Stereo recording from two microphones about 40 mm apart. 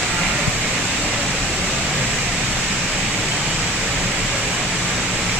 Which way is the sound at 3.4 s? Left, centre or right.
Right.